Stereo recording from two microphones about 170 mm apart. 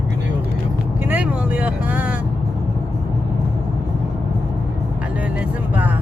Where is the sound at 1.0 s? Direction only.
10° right (ahead or behind).